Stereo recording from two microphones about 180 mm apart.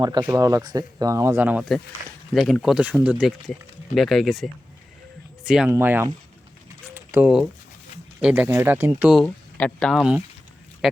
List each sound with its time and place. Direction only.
0.0 s speech: 25° right (ahead or behind)
6.9 s a sound: 10° right (ahead or behind)
8.2 s speech: 10° right (ahead or behind)
9.2 s speech: 5° left (ahead or behind)